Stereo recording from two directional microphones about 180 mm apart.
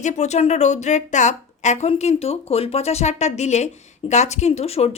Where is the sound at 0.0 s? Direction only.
40° left (ahead or behind).